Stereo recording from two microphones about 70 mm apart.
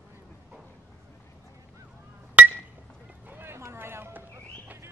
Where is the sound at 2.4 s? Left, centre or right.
Right.